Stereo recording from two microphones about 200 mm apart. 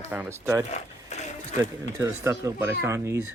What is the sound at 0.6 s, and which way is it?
Speech, 35° left (ahead or behind).